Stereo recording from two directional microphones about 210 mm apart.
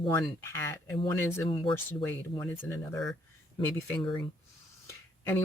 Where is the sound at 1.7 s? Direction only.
10° left (ahead or behind).